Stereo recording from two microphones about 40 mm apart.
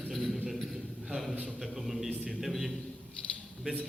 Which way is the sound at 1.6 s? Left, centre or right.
Centre.